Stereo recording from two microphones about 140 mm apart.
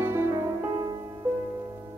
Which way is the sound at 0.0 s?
20° right (ahead or behind).